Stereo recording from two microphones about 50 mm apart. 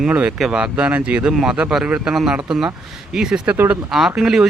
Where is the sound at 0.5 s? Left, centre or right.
Right.